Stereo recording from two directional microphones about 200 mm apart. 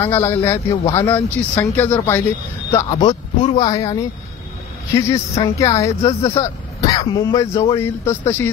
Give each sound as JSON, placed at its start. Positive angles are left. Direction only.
{"t": 0.0, "sound": "a man's voice", "side_deg": 10}